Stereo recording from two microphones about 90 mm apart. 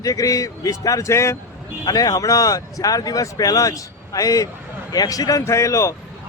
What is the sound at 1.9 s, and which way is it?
Speech, 45° left (ahead or behind).